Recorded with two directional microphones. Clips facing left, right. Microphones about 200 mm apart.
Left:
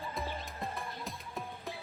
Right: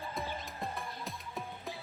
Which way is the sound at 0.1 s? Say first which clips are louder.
Even; centre (ahead or behind).